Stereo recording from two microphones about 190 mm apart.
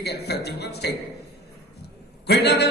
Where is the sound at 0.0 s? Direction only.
60° left (ahead or behind).